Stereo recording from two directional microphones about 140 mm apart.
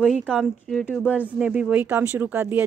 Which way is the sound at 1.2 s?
10° right (ahead or behind).